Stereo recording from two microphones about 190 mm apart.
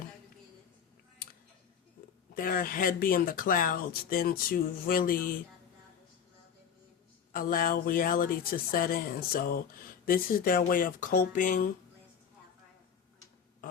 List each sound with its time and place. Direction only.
2.3 s speech: 50° left (ahead or behind)
7.3 s speech: 50° left (ahead or behind)